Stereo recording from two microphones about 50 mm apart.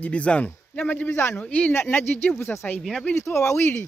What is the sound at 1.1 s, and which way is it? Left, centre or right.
Speech, left.